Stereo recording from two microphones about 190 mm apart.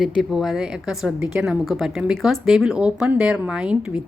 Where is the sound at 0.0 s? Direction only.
Centre (ahead or behind).